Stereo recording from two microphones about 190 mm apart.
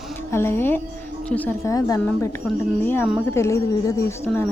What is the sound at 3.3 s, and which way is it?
A woman's voice, 15° left (ahead or behind).